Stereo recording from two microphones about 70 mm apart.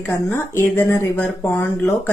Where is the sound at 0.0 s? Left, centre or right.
Left.